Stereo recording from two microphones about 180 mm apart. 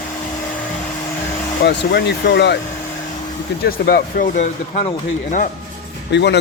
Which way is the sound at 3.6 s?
55° left (ahead or behind).